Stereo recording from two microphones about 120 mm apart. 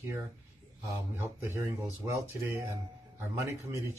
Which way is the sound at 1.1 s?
20° right (ahead or behind).